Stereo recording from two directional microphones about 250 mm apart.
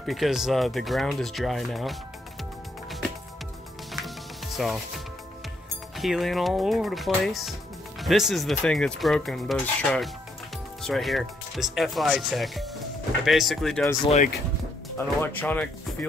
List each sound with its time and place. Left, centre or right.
0.0 s speech: centre
3.9 s music: centre
5.9 s speech: centre
14.0 s speech: left
15.2 s speech: centre